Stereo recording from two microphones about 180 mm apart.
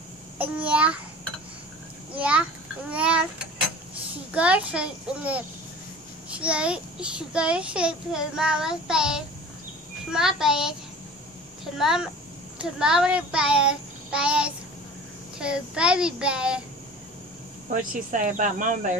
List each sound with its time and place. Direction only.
0.4 s a child's voice: 5° right (ahead or behind)
2.1 s a child's voice: 5° right (ahead or behind)
18.1 s speech: 45° right (ahead or behind)